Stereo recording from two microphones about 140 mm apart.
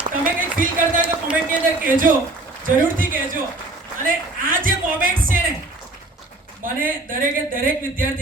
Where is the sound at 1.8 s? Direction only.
80° right.